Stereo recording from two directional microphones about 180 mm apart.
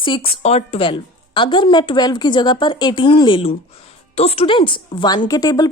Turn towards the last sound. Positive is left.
turn(degrees=20)  # may be behind; listen again after turning